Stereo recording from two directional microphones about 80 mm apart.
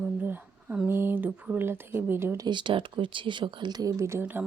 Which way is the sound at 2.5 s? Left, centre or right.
Right.